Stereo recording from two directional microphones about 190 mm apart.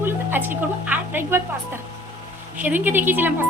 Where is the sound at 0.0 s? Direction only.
10° right (ahead or behind).